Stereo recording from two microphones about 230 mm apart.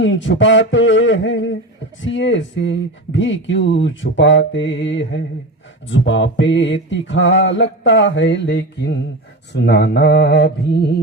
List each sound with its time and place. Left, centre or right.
0.0 s speech: left